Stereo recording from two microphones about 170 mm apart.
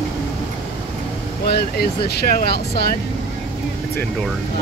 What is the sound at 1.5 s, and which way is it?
Speech, 70° left (ahead or behind).